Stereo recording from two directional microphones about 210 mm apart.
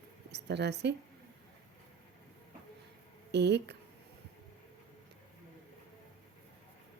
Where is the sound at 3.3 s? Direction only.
55° right (ahead or behind).